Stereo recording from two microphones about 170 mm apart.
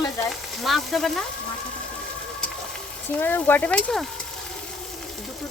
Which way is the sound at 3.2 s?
10° left (ahead or behind).